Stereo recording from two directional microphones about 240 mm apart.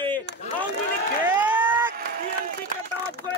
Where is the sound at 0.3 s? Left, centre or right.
Right.